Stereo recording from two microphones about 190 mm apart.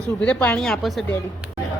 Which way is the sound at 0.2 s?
5° left (ahead or behind).